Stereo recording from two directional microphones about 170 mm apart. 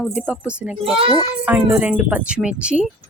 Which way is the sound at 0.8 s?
30° right (ahead or behind).